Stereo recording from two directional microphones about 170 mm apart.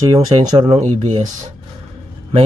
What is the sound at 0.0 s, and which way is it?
Speech, 25° right (ahead or behind).